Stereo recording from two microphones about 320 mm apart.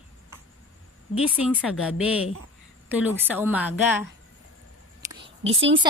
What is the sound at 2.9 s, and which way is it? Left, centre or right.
A woman's voice, centre.